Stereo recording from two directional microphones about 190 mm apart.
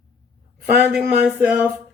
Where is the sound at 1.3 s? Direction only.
5° right (ahead or behind).